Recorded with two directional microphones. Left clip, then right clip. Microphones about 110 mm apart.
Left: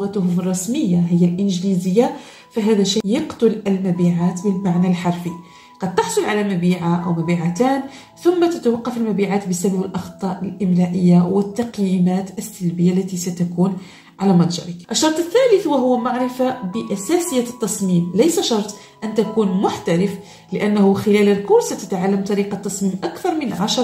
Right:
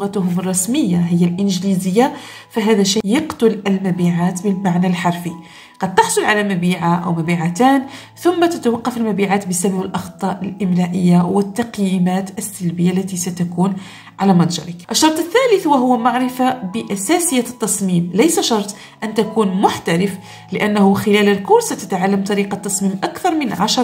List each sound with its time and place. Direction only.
0.0 s a woman's voice: 55° right (ahead or behind)